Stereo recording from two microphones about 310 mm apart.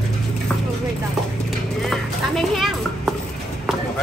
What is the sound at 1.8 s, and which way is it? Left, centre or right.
Music, centre.